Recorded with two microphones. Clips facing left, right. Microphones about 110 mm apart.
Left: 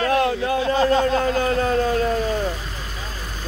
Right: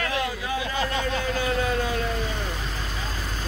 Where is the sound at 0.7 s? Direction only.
40° left (ahead or behind).